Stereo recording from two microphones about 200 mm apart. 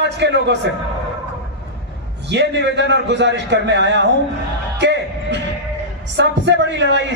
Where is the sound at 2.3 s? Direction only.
60° right (ahead or behind).